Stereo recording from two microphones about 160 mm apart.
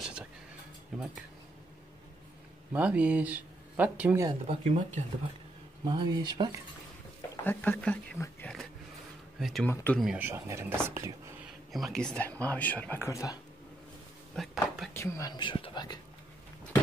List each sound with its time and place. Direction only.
0.9 s speech: centre (ahead or behind)
2.7 s speech: 10° right (ahead or behind)
4.5 s speech: 45° right (ahead or behind)
5.9 s speech: 25° right (ahead or behind)
7.4 s speech: 10° left (ahead or behind)
9.4 s speech: centre (ahead or behind)
10.2 s speech: 15° right (ahead or behind)
11.7 s speech: centre (ahead or behind); by 13.4 s 20° left (ahead or behind)
14.3 s a sound: centre (ahead or behind)
15.0 s speech: 20° left (ahead or behind)